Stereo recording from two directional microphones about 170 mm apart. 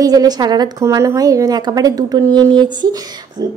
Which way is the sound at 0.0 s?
20° right (ahead or behind).